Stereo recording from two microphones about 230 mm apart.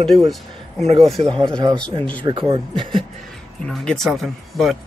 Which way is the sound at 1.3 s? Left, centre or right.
Centre.